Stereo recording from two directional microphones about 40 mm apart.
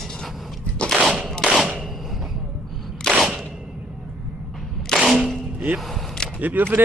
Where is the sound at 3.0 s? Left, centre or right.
Centre.